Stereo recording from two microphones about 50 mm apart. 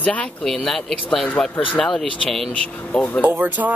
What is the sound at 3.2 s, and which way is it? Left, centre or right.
Speech, right.